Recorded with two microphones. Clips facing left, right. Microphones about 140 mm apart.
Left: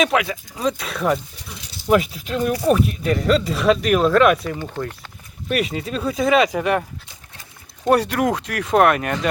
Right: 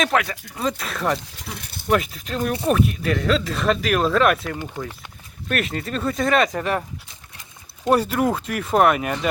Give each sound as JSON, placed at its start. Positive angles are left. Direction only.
{"t": 0.0, "sound": "speech", "side_deg": 5}
{"t": 1.5, "sound": "speech", "side_deg": -55}
{"t": 2.0, "sound": "speech", "side_deg": 0}
{"t": 7.9, "sound": "speech", "side_deg": 0}